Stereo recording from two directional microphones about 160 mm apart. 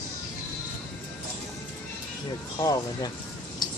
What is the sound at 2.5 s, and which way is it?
Speech, 25° left (ahead or behind).